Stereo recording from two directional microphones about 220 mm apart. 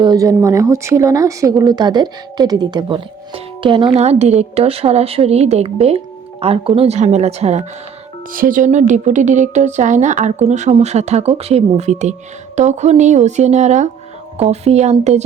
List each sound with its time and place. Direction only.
0.0 s speech: 15° right (ahead or behind)